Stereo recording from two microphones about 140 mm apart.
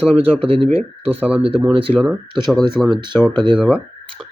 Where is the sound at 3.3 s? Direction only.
35° right (ahead or behind).